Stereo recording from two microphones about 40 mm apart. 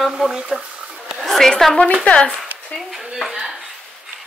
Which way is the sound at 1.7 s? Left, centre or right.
Left.